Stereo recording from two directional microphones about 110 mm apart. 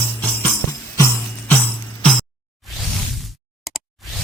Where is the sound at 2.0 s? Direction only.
10° left (ahead or behind).